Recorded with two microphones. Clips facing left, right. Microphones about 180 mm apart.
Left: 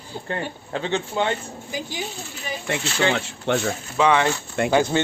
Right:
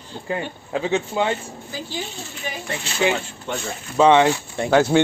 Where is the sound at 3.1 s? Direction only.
70° left (ahead or behind).